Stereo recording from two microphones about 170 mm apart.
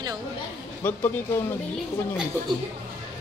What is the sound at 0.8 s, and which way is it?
Speech, 15° left (ahead or behind).